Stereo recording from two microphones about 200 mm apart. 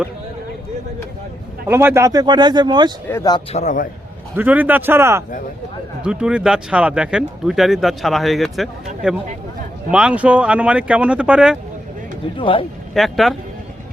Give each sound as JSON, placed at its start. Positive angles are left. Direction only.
{"t": 1.6, "sound": "speech", "side_deg": -10}
{"t": 3.1, "sound": "speech", "side_deg": 15}
{"t": 3.5, "sound": "a man's voice", "side_deg": 35}
{"t": 4.4, "sound": "speech", "side_deg": -10}
{"t": 9.9, "sound": "speech", "side_deg": -5}
{"t": 12.4, "sound": "speech", "side_deg": 25}
{"t": 12.9, "sound": "speech", "side_deg": 0}